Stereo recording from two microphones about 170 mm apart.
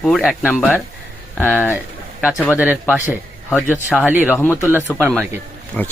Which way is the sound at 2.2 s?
5° right (ahead or behind).